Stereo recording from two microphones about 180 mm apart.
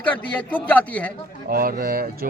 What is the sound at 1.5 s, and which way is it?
Speech, 55° right (ahead or behind).